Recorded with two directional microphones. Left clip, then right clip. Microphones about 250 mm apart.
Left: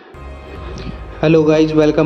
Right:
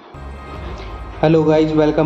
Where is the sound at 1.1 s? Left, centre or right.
Left.